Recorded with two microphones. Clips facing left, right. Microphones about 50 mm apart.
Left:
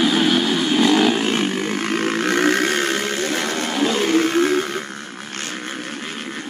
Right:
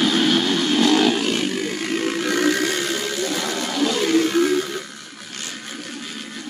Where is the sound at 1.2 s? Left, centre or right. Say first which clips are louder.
Left 2 dB; left.